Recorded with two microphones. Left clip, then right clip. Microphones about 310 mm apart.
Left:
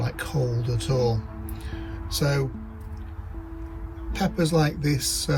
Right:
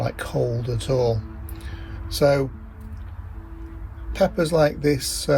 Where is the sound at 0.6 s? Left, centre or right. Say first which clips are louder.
Right 3 dB; centre.